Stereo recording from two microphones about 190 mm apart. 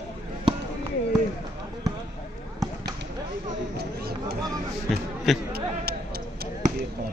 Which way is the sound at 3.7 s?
55° right (ahead or behind).